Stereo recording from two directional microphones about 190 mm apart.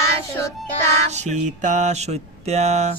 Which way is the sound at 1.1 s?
40° right (ahead or behind).